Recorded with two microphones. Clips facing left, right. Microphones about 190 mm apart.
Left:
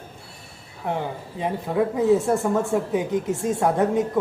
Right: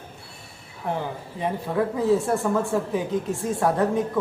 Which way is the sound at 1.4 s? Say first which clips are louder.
Left 2 dB; 20° left (ahead or behind).